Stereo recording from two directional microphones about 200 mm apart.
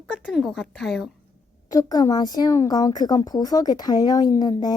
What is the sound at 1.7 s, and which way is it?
Speech, 20° left (ahead or behind).